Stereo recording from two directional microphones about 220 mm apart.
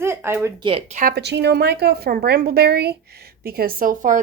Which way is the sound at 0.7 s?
30° right (ahead or behind).